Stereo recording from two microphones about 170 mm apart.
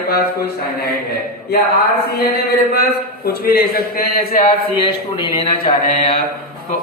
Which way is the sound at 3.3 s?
65° left (ahead or behind).